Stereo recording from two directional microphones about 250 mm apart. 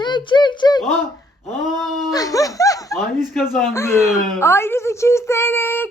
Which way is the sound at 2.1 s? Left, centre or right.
Centre.